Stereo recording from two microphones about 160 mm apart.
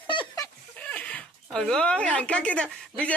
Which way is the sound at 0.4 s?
10° left (ahead or behind).